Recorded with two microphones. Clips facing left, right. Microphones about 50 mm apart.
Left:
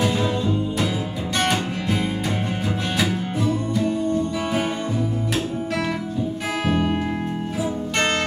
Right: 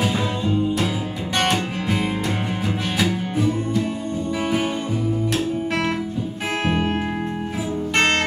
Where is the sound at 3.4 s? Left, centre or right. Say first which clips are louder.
Left 2 dB; centre.